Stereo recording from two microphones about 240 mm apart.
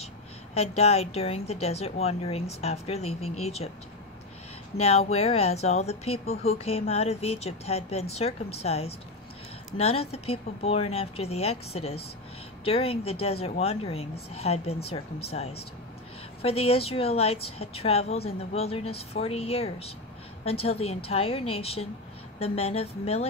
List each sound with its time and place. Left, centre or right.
0.6 s a woman's voice: left
4.7 s a woman's voice: left